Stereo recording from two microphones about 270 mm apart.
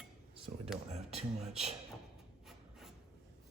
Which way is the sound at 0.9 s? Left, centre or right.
Right.